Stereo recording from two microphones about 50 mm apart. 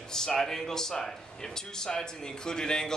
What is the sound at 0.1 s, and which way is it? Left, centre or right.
Speech, centre.